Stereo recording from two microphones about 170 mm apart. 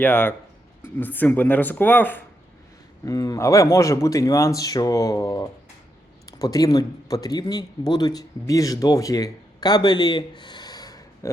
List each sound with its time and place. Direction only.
0.0 s a man's voice: 10° left (ahead or behind)